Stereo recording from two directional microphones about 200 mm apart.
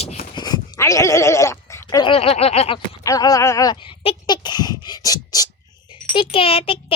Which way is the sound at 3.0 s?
15° left (ahead or behind).